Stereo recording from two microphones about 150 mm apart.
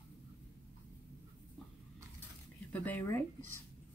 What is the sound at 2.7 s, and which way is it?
Speech, 10° left (ahead or behind).